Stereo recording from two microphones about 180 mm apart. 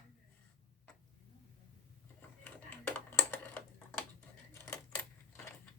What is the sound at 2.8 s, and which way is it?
Typing, 10° left (ahead or behind).